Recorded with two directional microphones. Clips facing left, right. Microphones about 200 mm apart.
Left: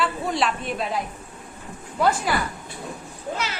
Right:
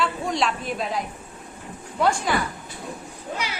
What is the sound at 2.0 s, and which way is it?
Music, 5° left (ahead or behind).